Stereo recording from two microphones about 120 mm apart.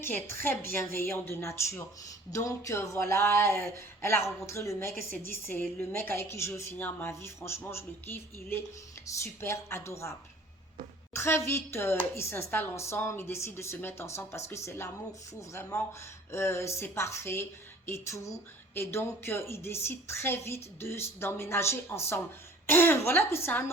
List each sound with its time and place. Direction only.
0.0 s a woman's voice: 15° left (ahead or behind)